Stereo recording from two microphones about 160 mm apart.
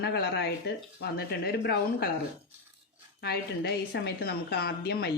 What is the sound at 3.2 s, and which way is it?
Speech, 90° left.